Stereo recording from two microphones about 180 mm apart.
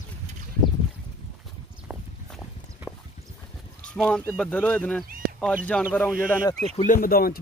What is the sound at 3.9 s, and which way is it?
Speech, 5° left (ahead or behind).